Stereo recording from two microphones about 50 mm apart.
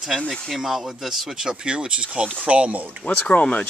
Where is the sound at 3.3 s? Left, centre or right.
Left.